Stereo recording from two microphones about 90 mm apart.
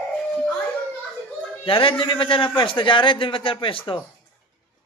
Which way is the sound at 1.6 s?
85° left.